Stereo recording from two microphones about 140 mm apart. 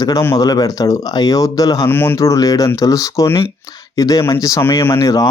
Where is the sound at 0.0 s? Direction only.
25° left (ahead or behind).